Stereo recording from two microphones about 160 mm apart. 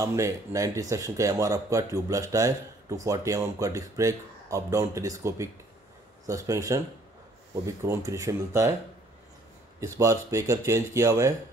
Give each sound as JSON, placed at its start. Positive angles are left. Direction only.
{"t": 0.0, "sound": "speech", "side_deg": -20}
{"t": 9.8, "sound": "speech", "side_deg": -20}